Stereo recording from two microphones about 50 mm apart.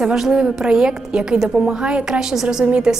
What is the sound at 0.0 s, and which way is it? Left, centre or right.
Speech, centre.